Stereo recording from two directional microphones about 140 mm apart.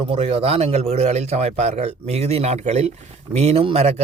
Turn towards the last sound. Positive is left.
turn(degrees=-45)  # may be behind; listen again after turning